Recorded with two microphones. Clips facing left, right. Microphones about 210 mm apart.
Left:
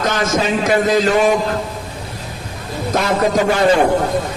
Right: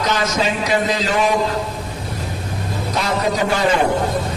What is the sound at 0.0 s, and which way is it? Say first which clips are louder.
A man's voice: left 2 dB; 50° left (ahead or behind).